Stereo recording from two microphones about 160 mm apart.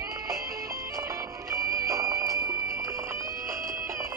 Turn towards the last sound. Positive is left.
turn(degrees=-20)  # may be behind; listen again after turning